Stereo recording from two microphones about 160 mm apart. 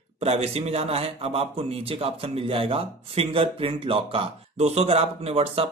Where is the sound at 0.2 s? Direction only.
40° right (ahead or behind).